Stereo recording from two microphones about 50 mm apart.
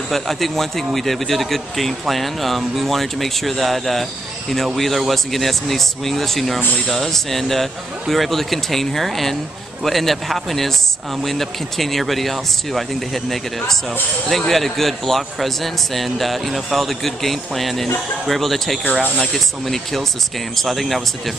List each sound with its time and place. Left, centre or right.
0.1 s a man's voice: centre
18.9 s speech: right
19.1 s a man's voice: centre